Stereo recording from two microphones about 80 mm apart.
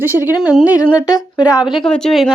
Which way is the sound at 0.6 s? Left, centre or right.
Left.